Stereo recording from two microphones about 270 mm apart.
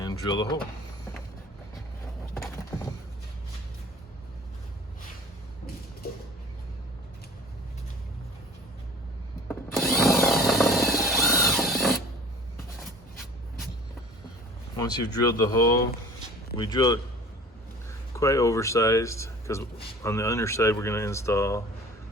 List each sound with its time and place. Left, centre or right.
0.0 s speech: centre
2.4 s a sound: centre
9.5 s wood: centre
10.9 s mechanisms: centre
14.8 s speech: centre
18.1 s speech: centre